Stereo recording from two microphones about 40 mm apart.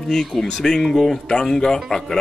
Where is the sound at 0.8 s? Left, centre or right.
Centre.